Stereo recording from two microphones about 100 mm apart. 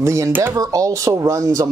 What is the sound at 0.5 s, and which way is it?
Speech, 35° right (ahead or behind).